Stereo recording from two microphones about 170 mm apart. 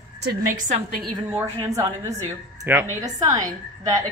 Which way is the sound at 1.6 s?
20° right (ahead or behind).